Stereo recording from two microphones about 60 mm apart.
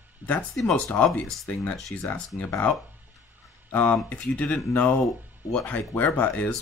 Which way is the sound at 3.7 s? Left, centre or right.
Left.